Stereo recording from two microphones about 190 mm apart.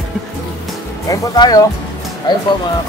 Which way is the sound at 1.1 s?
20° left (ahead or behind).